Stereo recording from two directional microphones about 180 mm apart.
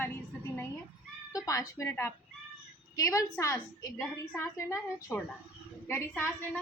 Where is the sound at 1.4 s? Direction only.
20° left (ahead or behind).